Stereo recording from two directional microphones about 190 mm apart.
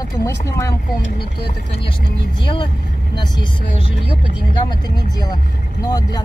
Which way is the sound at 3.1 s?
25° left (ahead or behind).